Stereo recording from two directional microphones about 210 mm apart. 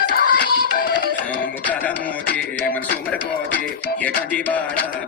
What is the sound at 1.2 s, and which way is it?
Music, 5° left (ahead or behind).